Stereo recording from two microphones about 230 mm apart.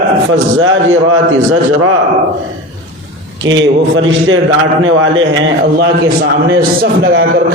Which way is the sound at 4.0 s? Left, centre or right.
Right.